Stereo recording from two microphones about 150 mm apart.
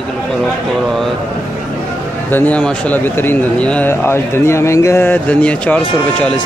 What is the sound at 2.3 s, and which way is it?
A man's voice, 10° left (ahead or behind).